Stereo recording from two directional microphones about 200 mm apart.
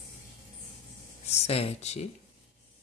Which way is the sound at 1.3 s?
30° left (ahead or behind).